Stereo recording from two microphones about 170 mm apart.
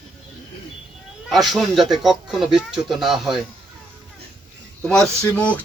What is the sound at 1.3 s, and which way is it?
Speech, centre (ahead or behind).